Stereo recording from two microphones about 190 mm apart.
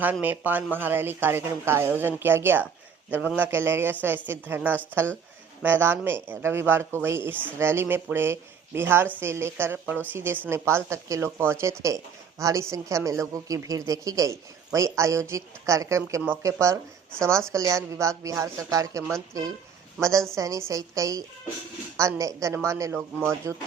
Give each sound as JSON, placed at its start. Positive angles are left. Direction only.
{"t": 0.0, "sound": "a woman's voice", "side_deg": -10}